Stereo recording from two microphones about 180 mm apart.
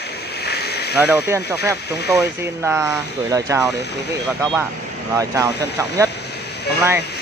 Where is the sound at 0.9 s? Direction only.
10° right (ahead or behind).